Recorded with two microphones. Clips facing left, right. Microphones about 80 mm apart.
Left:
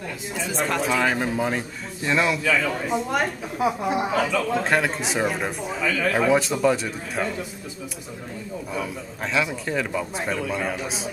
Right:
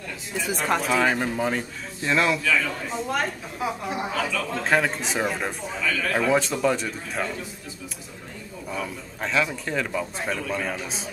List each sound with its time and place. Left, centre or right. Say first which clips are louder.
0.7 s speech: even; centre
2.4 s speech: left 2 dB; centre
4.6 s speech: even; centre
5.9 s a man's voice: left 3 dB; left
6.1 s speech: left 1 dB; centre
8.7 s speech: even; centre